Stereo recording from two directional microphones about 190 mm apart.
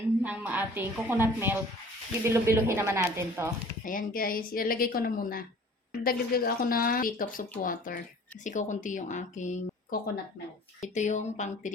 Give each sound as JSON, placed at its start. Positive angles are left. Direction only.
{"t": 0.2, "sound": "a woman's voice", "side_deg": -10}
{"t": 3.8, "sound": "a woman's voice", "side_deg": 45}